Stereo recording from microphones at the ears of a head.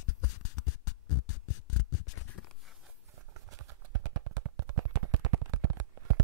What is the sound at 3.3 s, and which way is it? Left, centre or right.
Clip-clop, right.